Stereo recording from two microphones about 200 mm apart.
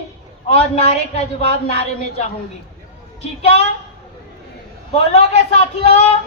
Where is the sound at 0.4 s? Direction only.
30° left (ahead or behind).